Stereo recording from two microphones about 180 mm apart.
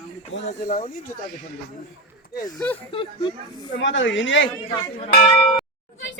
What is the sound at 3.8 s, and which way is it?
Speech, 90° left.